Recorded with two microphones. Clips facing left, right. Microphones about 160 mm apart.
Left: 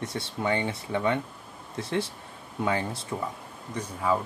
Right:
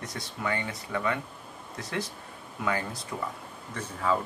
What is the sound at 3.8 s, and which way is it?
Speech, 15° left (ahead or behind).